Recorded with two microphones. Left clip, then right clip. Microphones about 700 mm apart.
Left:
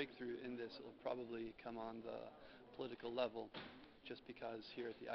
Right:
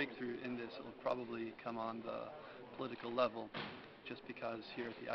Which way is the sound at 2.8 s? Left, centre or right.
Left.